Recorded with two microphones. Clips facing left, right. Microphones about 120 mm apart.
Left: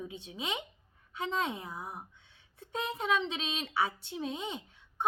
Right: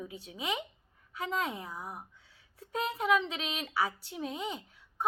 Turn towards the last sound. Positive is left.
turn(degrees=25)  # may be behind; listen again after turning